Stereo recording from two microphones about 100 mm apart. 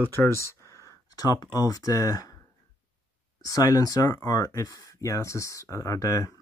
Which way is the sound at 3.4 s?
40° left (ahead or behind).